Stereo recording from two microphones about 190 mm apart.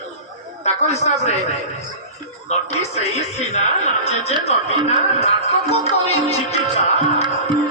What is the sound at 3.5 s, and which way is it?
Speech, 35° left (ahead or behind).